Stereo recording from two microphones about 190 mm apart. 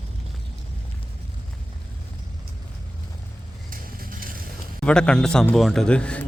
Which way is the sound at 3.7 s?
50° right (ahead or behind).